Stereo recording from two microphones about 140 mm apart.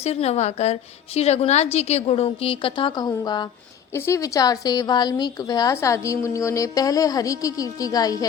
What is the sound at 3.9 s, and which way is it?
A woman's voice, 20° left (ahead or behind).